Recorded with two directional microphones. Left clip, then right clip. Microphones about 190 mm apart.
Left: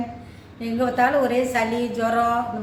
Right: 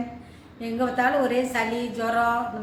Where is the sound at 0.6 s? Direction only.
Centre (ahead or behind).